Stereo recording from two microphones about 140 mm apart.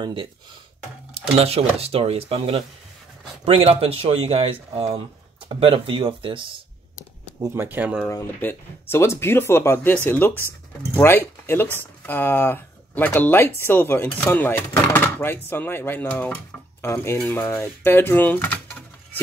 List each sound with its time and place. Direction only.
0.0 s speech: 40° right (ahead or behind)
7.3 s speech: 20° right (ahead or behind)
8.1 s speech: 15° left (ahead or behind)